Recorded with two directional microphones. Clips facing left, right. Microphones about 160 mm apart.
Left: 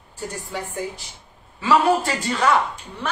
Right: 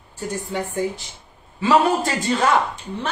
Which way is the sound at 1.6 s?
25° right (ahead or behind).